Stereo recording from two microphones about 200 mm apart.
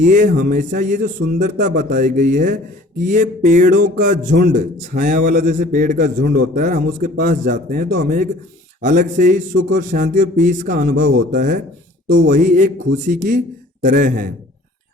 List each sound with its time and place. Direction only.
0.0 s a man's voice: 40° right (ahead or behind)
12.0 s speech: 65° right (ahead or behind)
12.3 s speech: 40° right (ahead or behind)